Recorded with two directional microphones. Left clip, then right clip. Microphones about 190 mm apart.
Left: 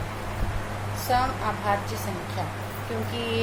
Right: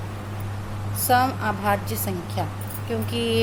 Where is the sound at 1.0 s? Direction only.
55° right (ahead or behind).